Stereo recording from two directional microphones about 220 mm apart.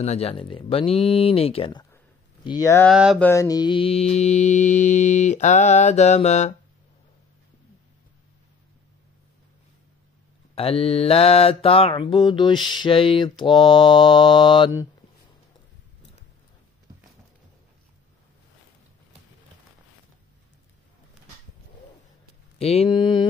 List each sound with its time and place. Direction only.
0.0 s mantra: 30° left (ahead or behind)
2.4 s speech: 15° left (ahead or behind)
2.9 s a sound: centre (ahead or behind)
3.3 s mantra: 15° left (ahead or behind); by 6.5 s 30° left (ahead or behind)
10.5 s mantra: 25° left (ahead or behind)
22.6 s mantra: 25° left (ahead or behind)